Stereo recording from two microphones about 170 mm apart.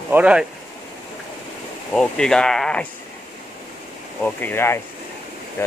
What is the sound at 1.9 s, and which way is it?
Speech, 5° left (ahead or behind).